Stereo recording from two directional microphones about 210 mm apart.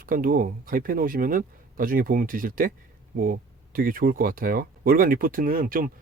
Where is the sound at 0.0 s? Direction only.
40° right (ahead or behind).